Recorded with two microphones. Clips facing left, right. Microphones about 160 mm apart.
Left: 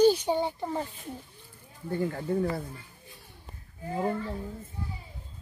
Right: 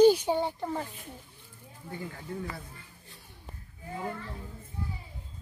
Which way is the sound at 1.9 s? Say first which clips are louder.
Left 10 dB; 50° left (ahead or behind).